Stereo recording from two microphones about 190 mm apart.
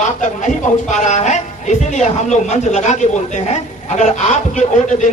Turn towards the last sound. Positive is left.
turn(degrees=40)  # may be behind; listen again after turning